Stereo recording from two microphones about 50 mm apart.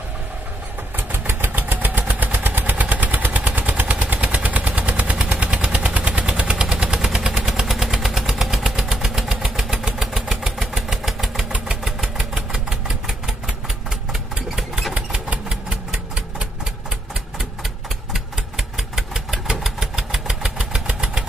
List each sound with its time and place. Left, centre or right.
0.9 s vehicle: right
3.5 s gunshot: right
6.2 s vehicle: centre
11.8 s engine: centre
14.5 s engine: centre
15.0 s engine: right
18.1 s engine: centre